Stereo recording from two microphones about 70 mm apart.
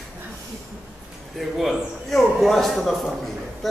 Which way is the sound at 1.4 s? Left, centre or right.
Centre.